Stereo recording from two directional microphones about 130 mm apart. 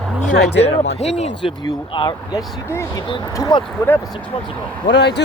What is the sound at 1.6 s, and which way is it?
Speech, 35° left (ahead or behind).